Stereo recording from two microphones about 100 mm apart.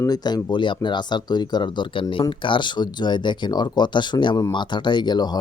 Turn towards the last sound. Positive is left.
turn(degrees=45)  # may be behind; listen again after turning